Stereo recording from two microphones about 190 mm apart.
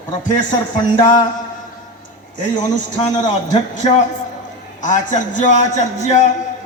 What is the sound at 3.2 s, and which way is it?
Speech, 40° left (ahead or behind).